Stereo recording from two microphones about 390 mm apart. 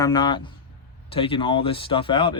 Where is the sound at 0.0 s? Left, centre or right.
Centre.